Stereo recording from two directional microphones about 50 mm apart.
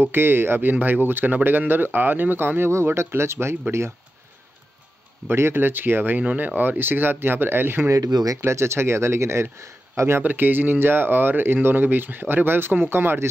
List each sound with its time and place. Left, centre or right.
0.0 s speech: right
2.7 s speech: right
5.3 s speech: right
8.5 s speech: right
10.2 s speech: right